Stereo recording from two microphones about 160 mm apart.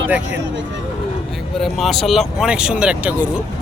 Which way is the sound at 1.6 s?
Centre (ahead or behind).